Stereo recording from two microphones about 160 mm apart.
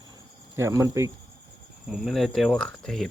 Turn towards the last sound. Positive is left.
turn(degrees=0)  # may be behind; listen again after turning